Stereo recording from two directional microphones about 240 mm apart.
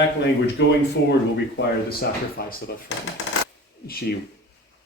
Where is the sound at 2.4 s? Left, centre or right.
Left.